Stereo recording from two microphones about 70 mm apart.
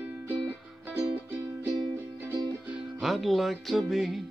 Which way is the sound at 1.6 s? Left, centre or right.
Right.